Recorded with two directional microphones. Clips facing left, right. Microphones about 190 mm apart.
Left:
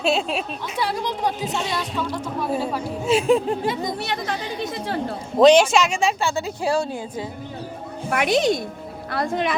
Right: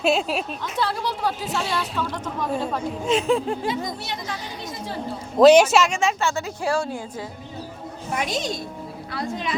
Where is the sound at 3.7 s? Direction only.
60° left (ahead or behind).